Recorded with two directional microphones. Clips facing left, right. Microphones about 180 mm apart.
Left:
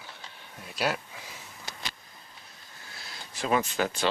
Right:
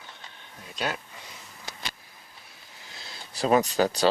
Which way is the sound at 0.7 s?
5° left (ahead or behind).